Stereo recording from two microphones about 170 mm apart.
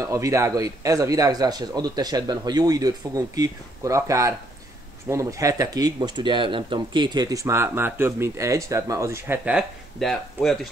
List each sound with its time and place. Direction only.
0.0 s speech: 20° right (ahead or behind); by 10.7 s centre (ahead or behind)